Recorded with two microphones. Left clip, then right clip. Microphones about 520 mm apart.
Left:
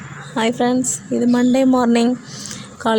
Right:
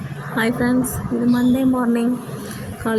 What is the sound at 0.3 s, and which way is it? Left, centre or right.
Speech, centre.